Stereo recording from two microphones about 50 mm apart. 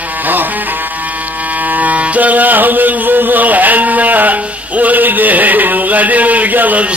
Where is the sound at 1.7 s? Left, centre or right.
Right.